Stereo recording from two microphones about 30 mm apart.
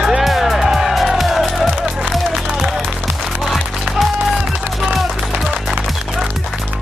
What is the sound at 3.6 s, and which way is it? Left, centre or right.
Music, centre.